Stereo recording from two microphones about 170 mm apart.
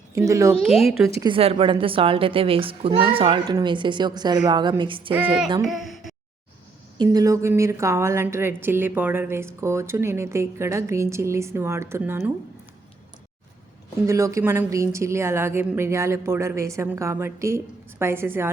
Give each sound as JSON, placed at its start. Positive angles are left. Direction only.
{"t": 0.1, "sound": "a woman's voice", "side_deg": -20}
{"t": 0.5, "sound": "speech", "side_deg": 0}
{"t": 1.2, "sound": "a woman's voice", "side_deg": -30}
{"t": 5.6, "sound": "a sound", "side_deg": 0}
{"t": 7.0, "sound": "a woman's voice", "side_deg": -20}
{"t": 14.1, "sound": "a woman's voice", "side_deg": -20}